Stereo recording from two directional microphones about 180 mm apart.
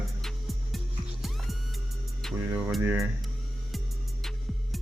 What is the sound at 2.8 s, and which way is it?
Speech, 15° right (ahead or behind).